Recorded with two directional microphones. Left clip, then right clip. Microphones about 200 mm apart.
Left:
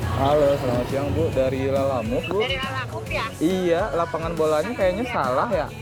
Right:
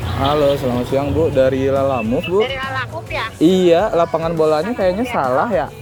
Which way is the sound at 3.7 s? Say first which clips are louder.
Right 8 dB; 60° right (ahead or behind).